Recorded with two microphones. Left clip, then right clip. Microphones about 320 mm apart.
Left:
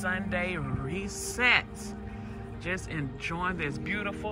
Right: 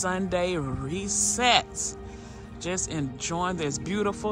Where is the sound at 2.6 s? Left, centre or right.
Centre.